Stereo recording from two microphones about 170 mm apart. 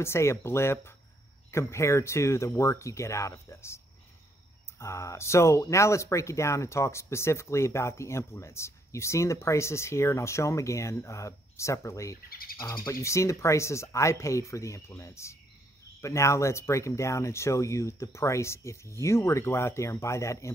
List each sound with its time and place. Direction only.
0.0 s speech: 15° left (ahead or behind)
12.3 s bird: 60° left (ahead or behind)
12.5 s speech: 20° left (ahead or behind)